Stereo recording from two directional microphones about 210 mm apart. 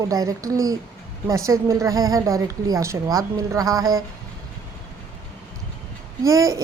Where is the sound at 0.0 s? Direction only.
15° right (ahead or behind).